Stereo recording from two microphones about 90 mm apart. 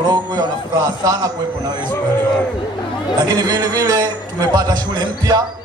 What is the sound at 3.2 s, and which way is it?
A man's voice, 50° right (ahead or behind).